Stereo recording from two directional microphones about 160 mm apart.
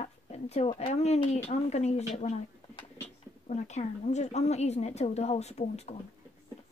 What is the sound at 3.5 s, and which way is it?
A woman's voice, 45° left (ahead or behind).